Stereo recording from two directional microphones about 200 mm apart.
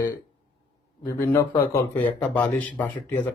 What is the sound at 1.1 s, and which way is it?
Speech, 15° left (ahead or behind).